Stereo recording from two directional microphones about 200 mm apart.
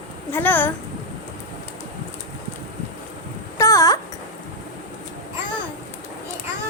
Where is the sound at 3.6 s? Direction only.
15° left (ahead or behind).